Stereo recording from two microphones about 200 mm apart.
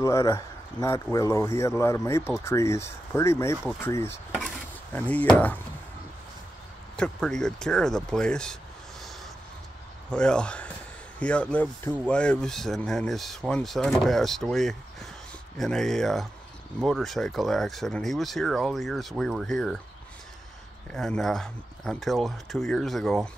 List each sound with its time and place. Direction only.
0.0 s speech: 15° left (ahead or behind)
7.0 s speech: 5° left (ahead or behind)
10.1 s speech: 5° left (ahead or behind)
20.9 s speech: centre (ahead or behind)